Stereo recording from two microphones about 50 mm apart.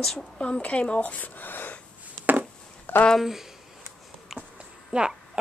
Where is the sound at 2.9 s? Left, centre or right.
Left.